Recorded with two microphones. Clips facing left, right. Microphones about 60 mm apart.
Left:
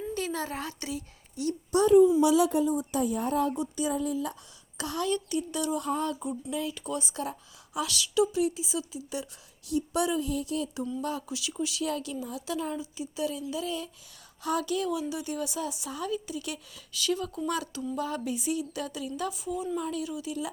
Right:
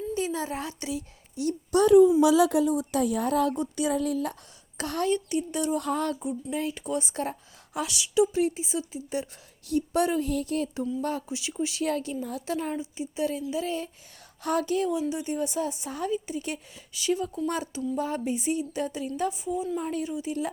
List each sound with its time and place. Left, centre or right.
0.1 s a sound: left
0.7 s a woman's voice: left
1.7 s a woman's voice: right
2.5 s a woman's voice: right
3.6 s speech: right
4.8 s a woman's voice: right
5.1 s speech: right
5.8 s a sound: right
6.5 s a woman's voice: right
7.9 s speech: centre
8.3 s a woman's voice: right
11.3 s a woman's voice: right
18.0 s a woman's voice: right
19.7 s a woman's voice: right